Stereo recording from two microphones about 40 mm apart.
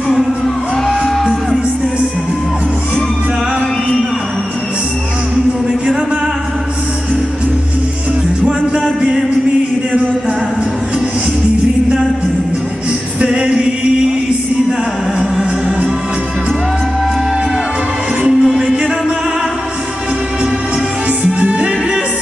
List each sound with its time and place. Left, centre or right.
0.8 s music: centre
13.2 s music: right
18.4 s music: centre
21.2 s music: right